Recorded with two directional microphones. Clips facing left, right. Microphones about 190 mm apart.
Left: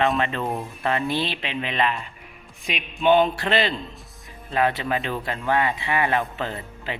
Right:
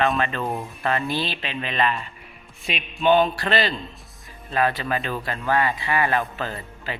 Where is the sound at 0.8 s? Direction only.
20° left (ahead or behind).